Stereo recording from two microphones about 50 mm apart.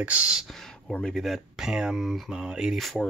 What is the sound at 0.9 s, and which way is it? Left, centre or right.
Speech, centre.